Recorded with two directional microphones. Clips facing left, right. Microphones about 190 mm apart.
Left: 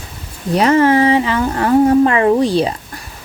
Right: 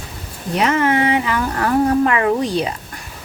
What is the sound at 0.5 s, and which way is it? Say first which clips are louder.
A woman's voice: left 5 dB; 35° left (ahead or behind).